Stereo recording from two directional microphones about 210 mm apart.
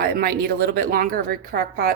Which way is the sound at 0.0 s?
45° right (ahead or behind).